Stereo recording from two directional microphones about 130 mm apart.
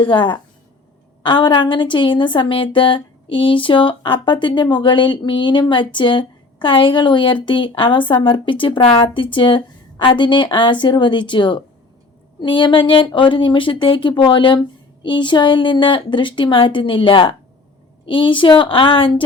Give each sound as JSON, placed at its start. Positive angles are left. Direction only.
{"t": 0.0, "sound": "a woman's voice", "side_deg": 40}